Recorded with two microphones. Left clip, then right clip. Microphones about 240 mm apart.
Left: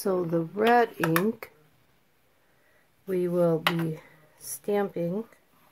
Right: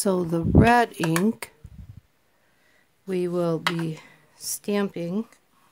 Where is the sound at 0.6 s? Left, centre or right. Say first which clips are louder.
Right 3 dB; right.